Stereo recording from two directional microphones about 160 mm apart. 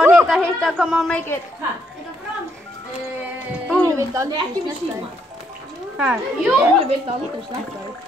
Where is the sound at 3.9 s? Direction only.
20° right (ahead or behind).